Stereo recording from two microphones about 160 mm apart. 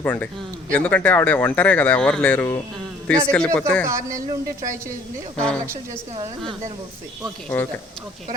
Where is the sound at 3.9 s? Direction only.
20° right (ahead or behind).